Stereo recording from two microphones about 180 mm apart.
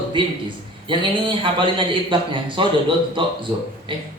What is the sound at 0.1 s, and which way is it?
A man's voice, 25° right (ahead or behind).